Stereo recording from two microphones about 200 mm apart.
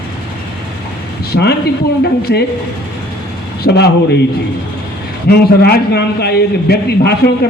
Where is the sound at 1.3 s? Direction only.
55° left (ahead or behind).